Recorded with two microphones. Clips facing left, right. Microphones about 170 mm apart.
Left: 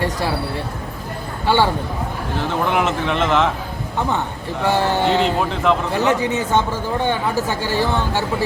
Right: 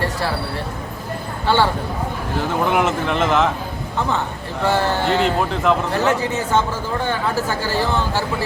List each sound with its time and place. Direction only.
1.5 s speech: 15° left (ahead or behind)
2.6 s a man's voice: centre (ahead or behind)
4.6 s speech: 15° left (ahead or behind)
5.1 s a man's voice: centre (ahead or behind)
6.1 s speech: 20° left (ahead or behind)